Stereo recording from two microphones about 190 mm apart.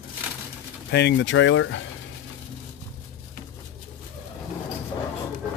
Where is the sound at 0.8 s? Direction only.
65° left (ahead or behind); by 1.8 s 85° left.